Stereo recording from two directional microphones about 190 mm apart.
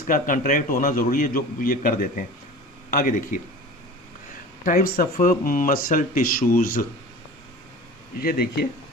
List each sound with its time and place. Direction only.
0.1 s a man's voice: 45° left (ahead or behind)
4.6 s a man's voice: 50° left (ahead or behind)
8.2 s a man's voice: 50° left (ahead or behind)